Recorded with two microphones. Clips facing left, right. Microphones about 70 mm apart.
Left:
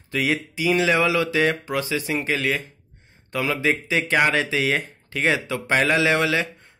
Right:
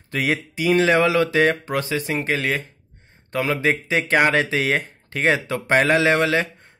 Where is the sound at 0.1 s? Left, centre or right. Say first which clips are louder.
Right 1 dB; right.